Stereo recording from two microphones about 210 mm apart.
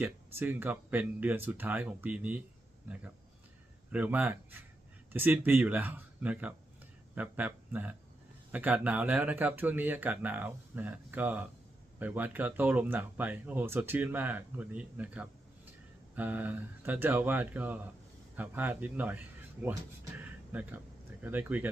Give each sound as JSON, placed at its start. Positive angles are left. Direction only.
{"t": 0.0, "sound": "speech", "side_deg": -10}
{"t": 3.9, "sound": "speech", "side_deg": -5}